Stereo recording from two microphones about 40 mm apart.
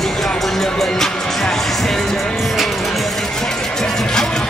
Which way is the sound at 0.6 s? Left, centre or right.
Centre.